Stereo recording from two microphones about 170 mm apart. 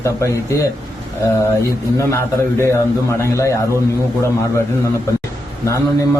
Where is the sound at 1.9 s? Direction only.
15° left (ahead or behind).